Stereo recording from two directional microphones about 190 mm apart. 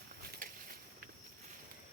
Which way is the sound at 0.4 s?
45° right (ahead or behind).